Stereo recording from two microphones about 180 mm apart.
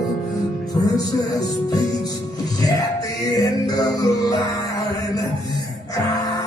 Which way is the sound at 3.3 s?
20° left (ahead or behind).